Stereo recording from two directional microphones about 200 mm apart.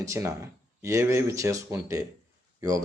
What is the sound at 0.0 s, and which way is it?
Speech, 15° right (ahead or behind).